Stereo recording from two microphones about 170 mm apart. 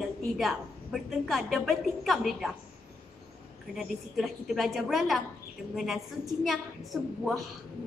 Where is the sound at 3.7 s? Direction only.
Centre (ahead or behind).